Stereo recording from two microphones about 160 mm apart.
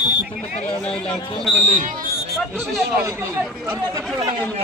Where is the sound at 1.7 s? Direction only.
55° right (ahead or behind).